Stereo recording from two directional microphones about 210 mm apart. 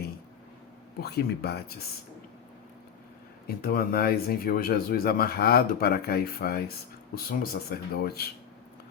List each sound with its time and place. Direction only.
1.0 s speech: 50° left (ahead or behind)
3.4 s speech: 45° left (ahead or behind)